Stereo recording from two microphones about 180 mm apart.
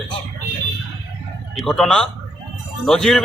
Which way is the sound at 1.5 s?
5° left (ahead or behind).